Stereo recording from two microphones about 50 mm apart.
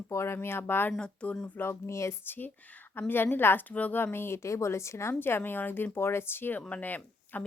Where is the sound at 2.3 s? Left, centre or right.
Left.